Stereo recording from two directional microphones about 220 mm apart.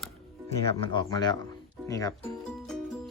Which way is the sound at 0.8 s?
20° left (ahead or behind).